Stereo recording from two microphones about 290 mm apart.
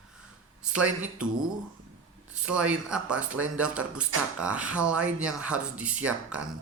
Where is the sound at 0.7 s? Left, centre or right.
Centre.